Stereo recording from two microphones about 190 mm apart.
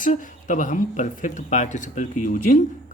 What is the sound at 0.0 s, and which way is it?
Speech, 45° left (ahead or behind).